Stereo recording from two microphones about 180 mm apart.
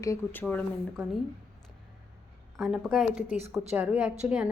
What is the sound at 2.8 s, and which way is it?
A woman's voice, 5° right (ahead or behind).